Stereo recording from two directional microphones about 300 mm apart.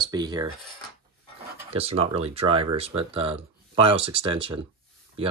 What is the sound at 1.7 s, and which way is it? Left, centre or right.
Speech, centre.